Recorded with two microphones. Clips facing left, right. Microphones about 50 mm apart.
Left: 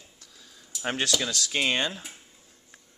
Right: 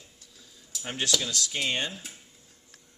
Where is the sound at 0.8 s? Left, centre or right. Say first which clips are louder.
Left 2 dB; left.